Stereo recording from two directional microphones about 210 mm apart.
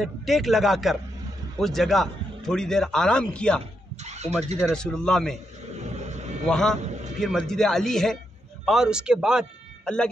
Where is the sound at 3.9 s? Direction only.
30° right (ahead or behind).